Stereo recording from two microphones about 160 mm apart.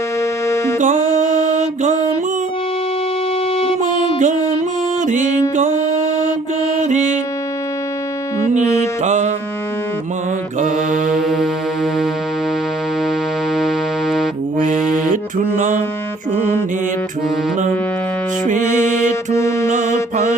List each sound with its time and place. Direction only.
0.4 s music: 15° left (ahead or behind)
0.8 s music: 50° right (ahead or behind)
3.6 s music: 35° left (ahead or behind)
5.0 s music: 50° right (ahead or behind)
6.8 s music: 45° right (ahead or behind)
9.0 s music: 50° right (ahead or behind)
10.6 s mantra: 55° right (ahead or behind)
11.1 s music: centre (ahead or behind)
13.6 s music: centre (ahead or behind)
15.5 s mantra: 50° right (ahead or behind)
19.3 s music: 15° left (ahead or behind)
19.6 s mantra: 50° right (ahead or behind)